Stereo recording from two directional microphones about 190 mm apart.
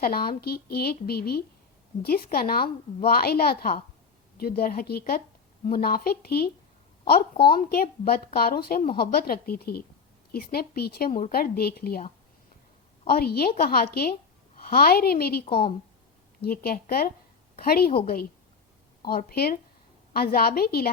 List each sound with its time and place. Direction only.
0.0 s a woman's voice: 55° left (ahead or behind)